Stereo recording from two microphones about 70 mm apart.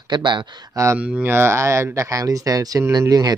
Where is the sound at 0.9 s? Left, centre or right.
Right.